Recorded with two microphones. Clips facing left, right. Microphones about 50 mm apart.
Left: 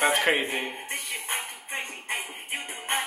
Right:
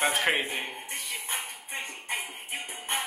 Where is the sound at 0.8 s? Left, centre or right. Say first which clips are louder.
Left 3 dB; left.